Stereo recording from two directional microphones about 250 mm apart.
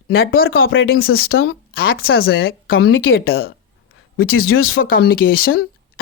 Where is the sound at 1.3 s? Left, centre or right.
Left.